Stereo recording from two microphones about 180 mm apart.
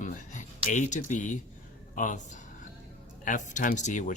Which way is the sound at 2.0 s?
45° left (ahead or behind).